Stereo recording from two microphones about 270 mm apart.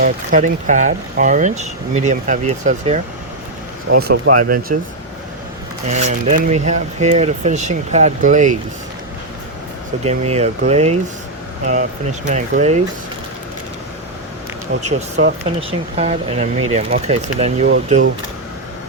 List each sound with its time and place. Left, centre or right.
0.0 s speech: right
5.9 s speech: right
10.0 s speech: right
14.8 s speech: right